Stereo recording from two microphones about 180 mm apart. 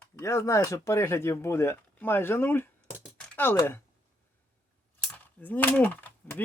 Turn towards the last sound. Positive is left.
turn(degrees=10)  # may be behind; listen again after turning